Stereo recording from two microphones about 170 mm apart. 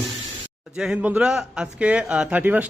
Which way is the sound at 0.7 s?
5° right (ahead or behind).